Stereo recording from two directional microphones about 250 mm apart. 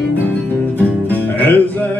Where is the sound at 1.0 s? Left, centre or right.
Centre.